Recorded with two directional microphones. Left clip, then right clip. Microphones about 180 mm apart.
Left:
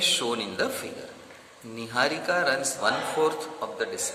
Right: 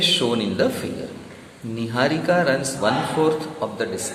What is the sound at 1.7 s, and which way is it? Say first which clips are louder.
Speech: right 4 dB; 30° left (ahead or behind).